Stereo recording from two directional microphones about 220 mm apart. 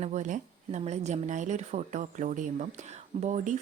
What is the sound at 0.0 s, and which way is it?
Speech, 35° right (ahead or behind).